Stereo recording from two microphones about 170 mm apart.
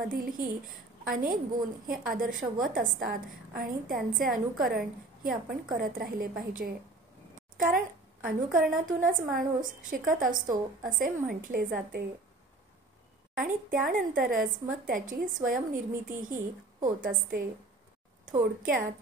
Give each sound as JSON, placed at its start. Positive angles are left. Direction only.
{"t": 0.1, "sound": "a woman's voice", "side_deg": -55}
{"t": 13.4, "sound": "a woman's voice", "side_deg": -50}